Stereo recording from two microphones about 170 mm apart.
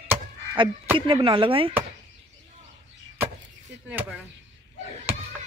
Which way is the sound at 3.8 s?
10° right (ahead or behind).